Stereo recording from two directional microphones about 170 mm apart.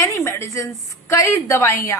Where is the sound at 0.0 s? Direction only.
15° left (ahead or behind).